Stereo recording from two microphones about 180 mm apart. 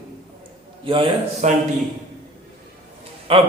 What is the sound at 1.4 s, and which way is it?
Speech, 40° right (ahead or behind).